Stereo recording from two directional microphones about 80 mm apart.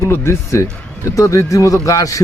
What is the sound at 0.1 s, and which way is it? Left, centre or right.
A man's voice, left.